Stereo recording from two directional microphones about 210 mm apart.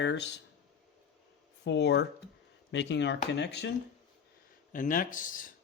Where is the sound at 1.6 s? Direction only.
55° left (ahead or behind).